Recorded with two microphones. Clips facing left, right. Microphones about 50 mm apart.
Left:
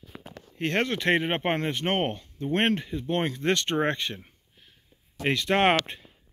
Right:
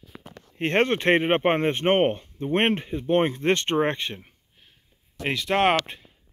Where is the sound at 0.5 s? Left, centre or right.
Right.